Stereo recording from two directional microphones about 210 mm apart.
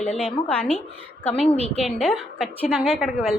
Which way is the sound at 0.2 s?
5° left (ahead or behind).